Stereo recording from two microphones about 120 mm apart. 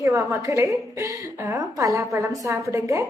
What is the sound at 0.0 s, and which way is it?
A woman's voice, 25° right (ahead or behind).